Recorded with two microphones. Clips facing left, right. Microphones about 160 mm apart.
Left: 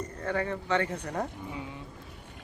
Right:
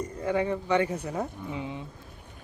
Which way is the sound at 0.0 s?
10° right (ahead or behind).